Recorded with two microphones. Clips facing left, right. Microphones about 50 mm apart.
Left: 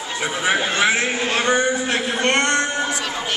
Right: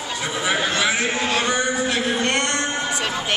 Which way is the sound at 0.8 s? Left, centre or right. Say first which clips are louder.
Left 2 dB; left.